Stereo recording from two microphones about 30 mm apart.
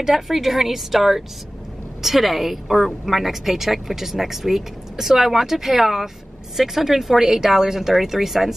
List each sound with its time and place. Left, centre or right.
0.0 s a woman's voice: centre